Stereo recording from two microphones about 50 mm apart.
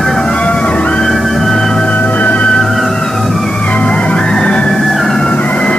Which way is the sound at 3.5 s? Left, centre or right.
Left.